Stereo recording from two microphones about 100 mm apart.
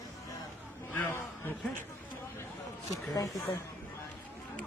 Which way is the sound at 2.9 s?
35° left (ahead or behind).